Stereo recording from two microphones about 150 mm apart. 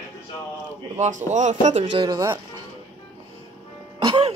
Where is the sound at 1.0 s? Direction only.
55° right (ahead or behind).